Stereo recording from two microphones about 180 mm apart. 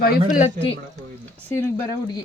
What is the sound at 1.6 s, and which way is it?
Speech, 10° left (ahead or behind).